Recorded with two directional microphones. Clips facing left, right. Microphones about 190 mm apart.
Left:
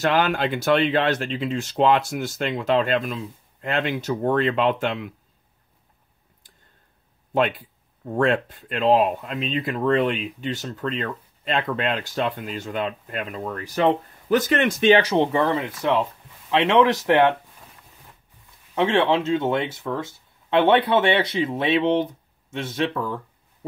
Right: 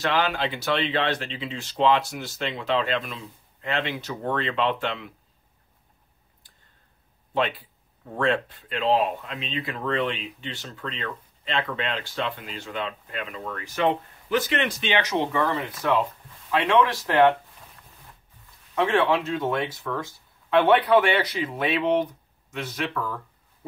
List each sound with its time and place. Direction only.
0.0 s speech: 50° left (ahead or behind)
8.2 s speech: 45° left (ahead or behind); by 17.4 s 20° left (ahead or behind)
18.8 s speech: 25° left (ahead or behind)